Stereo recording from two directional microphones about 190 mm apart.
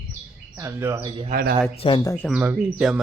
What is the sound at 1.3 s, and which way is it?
Speech, 50° right (ahead or behind).